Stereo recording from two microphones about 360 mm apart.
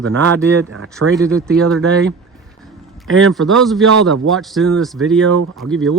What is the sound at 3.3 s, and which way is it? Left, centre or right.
Speech, centre.